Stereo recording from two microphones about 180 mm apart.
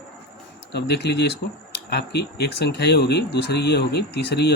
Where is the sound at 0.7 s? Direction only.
65° left (ahead or behind).